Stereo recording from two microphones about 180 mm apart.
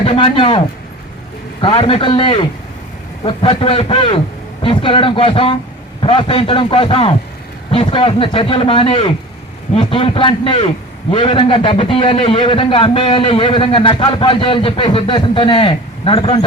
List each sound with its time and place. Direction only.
0.0 s a man's voice: 30° left (ahead or behind)
1.6 s a man's voice: 30° left (ahead or behind)